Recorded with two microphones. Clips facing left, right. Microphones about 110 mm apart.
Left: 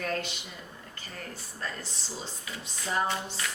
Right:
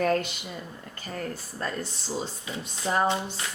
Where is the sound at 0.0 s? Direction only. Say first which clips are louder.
Right 8 dB; 45° right (ahead or behind).